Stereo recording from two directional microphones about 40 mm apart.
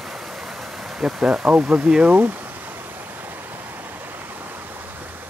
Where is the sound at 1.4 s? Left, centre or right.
Right.